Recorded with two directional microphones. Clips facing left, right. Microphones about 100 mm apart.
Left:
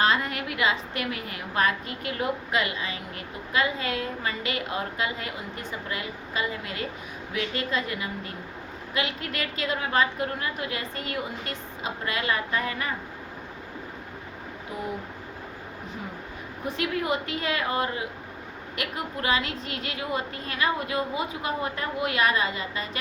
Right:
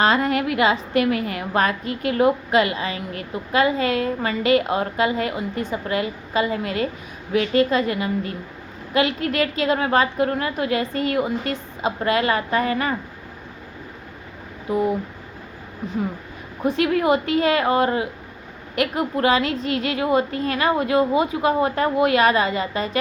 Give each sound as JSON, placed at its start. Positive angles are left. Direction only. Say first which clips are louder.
{"t": 0.0, "sound": "a woman's voice", "louder": "right 6 dB", "side_deg": -90}
{"t": 16.7, "sound": "a woman's voice", "louder": "right 8 dB", "side_deg": -75}
{"t": 18.8, "sound": "a woman's voice", "louder": "right 11 dB", "side_deg": -90}